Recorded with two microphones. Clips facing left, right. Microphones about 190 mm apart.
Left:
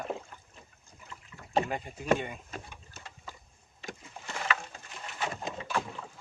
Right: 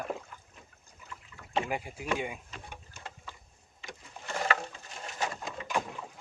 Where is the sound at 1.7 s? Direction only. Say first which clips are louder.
Right 1 dB; 10° right (ahead or behind).